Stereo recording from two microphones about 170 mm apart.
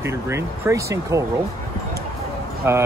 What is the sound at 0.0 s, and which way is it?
Speech, 15° right (ahead or behind).